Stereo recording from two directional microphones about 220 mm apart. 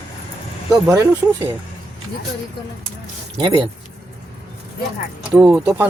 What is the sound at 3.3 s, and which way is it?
Speech, 20° right (ahead or behind).